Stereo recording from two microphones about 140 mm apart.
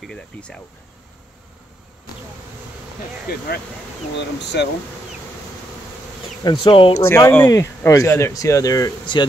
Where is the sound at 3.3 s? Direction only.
90° left.